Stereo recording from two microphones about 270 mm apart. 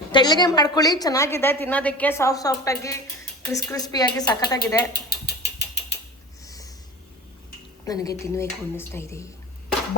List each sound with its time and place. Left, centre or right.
0.1 s a woman's voice: centre
4.9 s ratchet: left
6.4 s a sound: centre
7.9 s a woman's voice: centre